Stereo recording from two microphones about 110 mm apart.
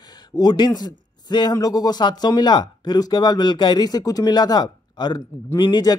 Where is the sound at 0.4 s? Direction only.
40° left (ahead or behind).